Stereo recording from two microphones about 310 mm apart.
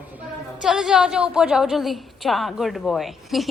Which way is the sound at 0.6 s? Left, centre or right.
Centre.